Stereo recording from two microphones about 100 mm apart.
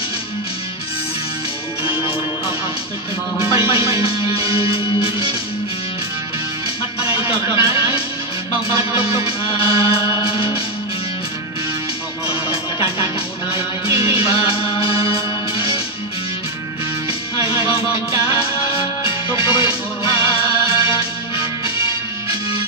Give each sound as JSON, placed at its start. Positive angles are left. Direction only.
{"t": 1.9, "sound": "music", "side_deg": 60}
{"t": 3.6, "sound": "music", "side_deg": 65}
{"t": 7.0, "sound": "music", "side_deg": 65}
{"t": 9.2, "sound": "music", "side_deg": 65}
{"t": 12.3, "sound": "music", "side_deg": 60}
{"t": 17.4, "sound": "music", "side_deg": 65}